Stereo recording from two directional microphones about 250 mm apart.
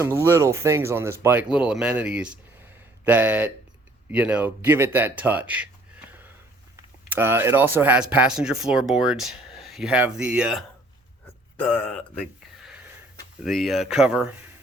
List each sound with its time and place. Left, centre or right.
0.0 s speech: centre
7.1 s speech: centre